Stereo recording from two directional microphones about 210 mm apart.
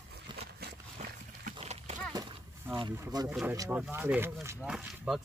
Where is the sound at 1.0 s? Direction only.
35° right (ahead or behind).